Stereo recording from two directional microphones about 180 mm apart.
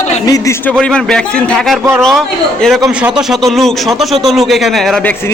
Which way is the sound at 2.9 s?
5° right (ahead or behind).